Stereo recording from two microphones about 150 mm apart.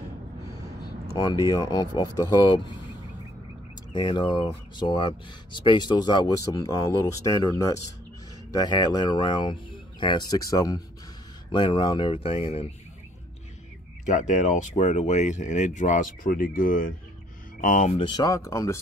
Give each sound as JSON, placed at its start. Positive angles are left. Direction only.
{"t": 1.1, "sound": "speech", "side_deg": 25}
{"t": 3.9, "sound": "speech", "side_deg": 30}
{"t": 14.0, "sound": "speech", "side_deg": 55}
{"t": 17.9, "sound": "speech", "side_deg": 30}